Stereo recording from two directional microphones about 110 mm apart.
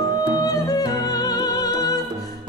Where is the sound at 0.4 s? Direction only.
35° left (ahead or behind).